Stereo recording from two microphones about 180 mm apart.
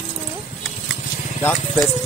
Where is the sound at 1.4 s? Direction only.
10° left (ahead or behind).